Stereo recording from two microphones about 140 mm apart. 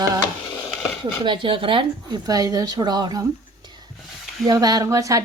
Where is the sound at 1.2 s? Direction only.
35° right (ahead or behind).